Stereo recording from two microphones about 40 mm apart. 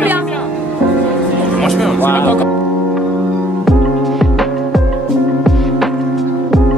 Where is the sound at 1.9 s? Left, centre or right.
Left.